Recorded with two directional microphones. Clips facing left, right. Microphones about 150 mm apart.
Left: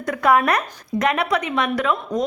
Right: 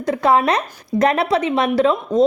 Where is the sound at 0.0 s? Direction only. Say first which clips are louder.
Right 2 dB; 25° right (ahead or behind).